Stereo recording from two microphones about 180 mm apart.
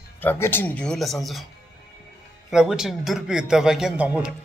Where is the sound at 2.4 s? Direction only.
5° right (ahead or behind).